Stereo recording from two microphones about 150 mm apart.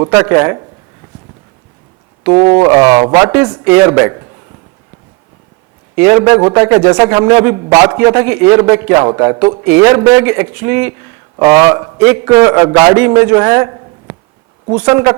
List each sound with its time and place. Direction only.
0.0 s speech: 25° right (ahead or behind)
2.2 s speech: 20° right (ahead or behind)
6.0 s speech: 20° right (ahead or behind)
7.6 s speech: 25° right (ahead or behind)
8.1 s a man's voice: 15° right (ahead or behind)
11.9 s speech: 15° right (ahead or behind)
12.4 s speech: 25° right (ahead or behind)
12.9 s a man's voice: 20° right (ahead or behind)